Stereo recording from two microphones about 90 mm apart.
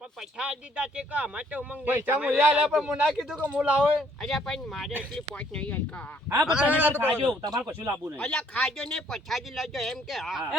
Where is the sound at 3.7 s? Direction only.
5° left (ahead or behind).